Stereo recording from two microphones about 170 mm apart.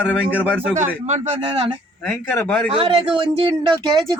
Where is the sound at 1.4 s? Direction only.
30° right (ahead or behind).